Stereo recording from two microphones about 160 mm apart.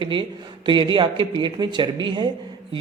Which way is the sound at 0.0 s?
30° right (ahead or behind).